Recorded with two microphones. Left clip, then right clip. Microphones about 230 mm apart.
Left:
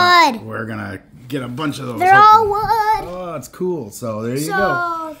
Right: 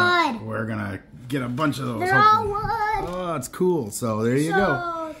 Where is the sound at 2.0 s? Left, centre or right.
Left.